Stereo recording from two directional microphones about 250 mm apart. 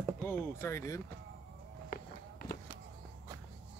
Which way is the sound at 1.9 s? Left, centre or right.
Left.